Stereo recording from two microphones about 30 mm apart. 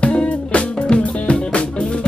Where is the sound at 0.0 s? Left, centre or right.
Left.